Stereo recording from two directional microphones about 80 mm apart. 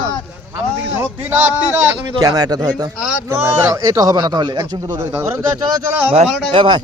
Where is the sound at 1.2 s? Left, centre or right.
Right.